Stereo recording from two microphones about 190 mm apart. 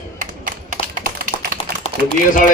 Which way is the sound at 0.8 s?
30° left (ahead or behind).